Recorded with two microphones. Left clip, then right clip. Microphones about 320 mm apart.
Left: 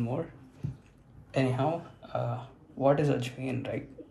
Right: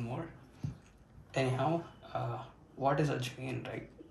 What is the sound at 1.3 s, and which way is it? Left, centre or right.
Speech, centre.